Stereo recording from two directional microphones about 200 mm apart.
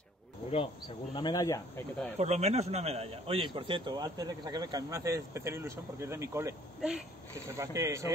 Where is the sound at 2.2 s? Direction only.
35° right (ahead or behind).